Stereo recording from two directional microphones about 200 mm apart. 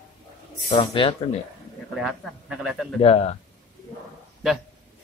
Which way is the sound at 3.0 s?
30° left (ahead or behind).